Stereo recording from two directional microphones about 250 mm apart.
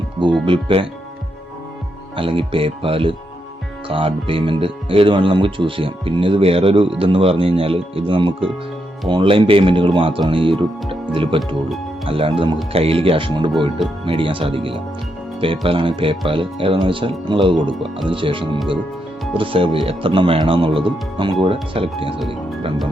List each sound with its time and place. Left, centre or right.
0.4 s speech: right
2.1 s speech: right